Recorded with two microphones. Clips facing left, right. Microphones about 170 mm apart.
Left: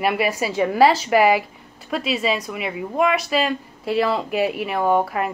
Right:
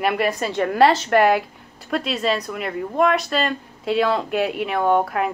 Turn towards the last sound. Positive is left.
turn(degrees=0)  # may be behind; listen again after turning